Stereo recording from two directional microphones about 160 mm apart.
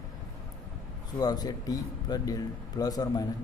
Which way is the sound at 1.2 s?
25° left (ahead or behind).